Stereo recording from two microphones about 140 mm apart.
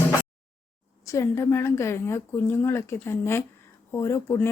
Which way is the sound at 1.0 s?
20° left (ahead or behind).